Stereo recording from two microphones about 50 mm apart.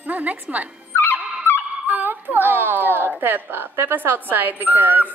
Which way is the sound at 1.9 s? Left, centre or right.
Right.